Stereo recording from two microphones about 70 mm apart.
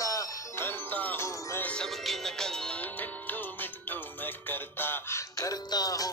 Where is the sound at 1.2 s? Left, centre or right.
Left.